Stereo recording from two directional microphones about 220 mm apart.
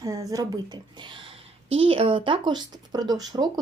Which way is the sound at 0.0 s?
15° right (ahead or behind).